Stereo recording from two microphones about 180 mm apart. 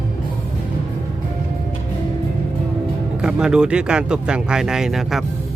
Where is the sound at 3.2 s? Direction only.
5° right (ahead or behind).